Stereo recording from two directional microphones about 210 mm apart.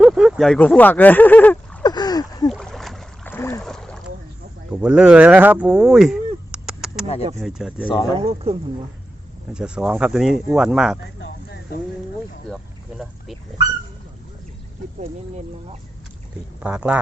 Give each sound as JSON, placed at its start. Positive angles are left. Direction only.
{"t": 0.0, "sound": "speech", "side_deg": 0}
{"t": 1.8, "sound": "a sound", "side_deg": 20}
{"t": 2.5, "sound": "boat", "side_deg": 0}
{"t": 4.7, "sound": "a sound", "side_deg": -5}
{"t": 7.4, "sound": "speech", "side_deg": -5}
{"t": 7.9, "sound": "speech", "side_deg": 20}
{"t": 8.2, "sound": "speech", "side_deg": -30}
{"t": 9.5, "sound": "speech", "side_deg": -5}
{"t": 16.6, "sound": "speech", "side_deg": -5}